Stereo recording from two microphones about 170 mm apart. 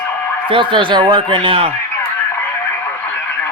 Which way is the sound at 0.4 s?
30° right (ahead or behind).